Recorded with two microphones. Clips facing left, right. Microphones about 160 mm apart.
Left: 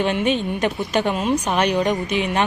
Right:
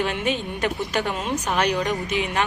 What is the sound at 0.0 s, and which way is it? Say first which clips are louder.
A woman's voice: left 5 dB; 20° left (ahead or behind).